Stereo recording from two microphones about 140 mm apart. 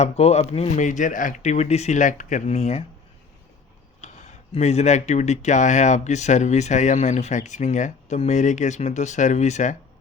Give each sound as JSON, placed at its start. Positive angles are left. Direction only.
{"t": 0.0, "sound": "speech", "side_deg": 50}
{"t": 0.9, "sound": "speech", "side_deg": 65}
{"t": 4.0, "sound": "speech", "side_deg": 55}